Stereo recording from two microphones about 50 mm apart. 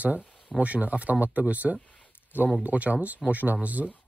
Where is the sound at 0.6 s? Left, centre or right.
Right.